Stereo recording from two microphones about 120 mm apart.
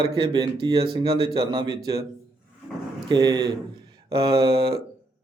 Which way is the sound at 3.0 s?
35° right (ahead or behind).